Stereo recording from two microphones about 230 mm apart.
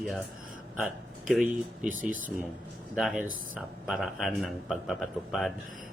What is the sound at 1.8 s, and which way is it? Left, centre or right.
Speech, right.